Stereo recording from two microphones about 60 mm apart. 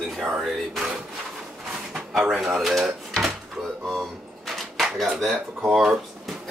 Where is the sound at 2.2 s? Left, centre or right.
Centre.